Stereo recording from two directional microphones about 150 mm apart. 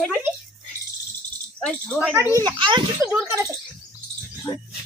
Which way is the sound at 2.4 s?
30° right (ahead or behind).